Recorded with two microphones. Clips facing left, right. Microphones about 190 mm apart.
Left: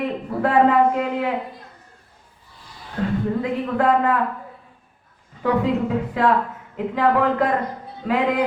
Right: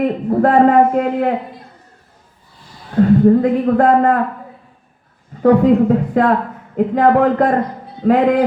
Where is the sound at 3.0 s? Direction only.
45° right (ahead or behind).